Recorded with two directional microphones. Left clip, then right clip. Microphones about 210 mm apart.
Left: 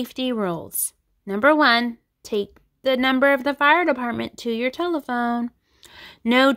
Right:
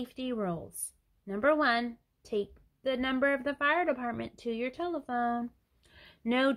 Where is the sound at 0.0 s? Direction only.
45° left (ahead or behind).